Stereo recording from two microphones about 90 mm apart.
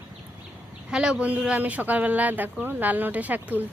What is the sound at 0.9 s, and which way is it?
Speech, 10° right (ahead or behind).